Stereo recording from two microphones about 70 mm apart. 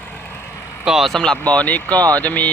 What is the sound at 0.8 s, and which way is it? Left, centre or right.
Speech, centre.